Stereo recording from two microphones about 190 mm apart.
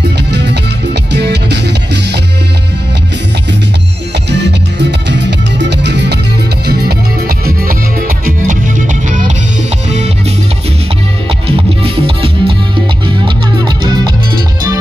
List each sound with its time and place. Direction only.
0.3 s music: 60° right (ahead or behind)
4.3 s music: 65° right (ahead or behind); by 10.1 s 35° right (ahead or behind)
11.4 s music: 30° right (ahead or behind)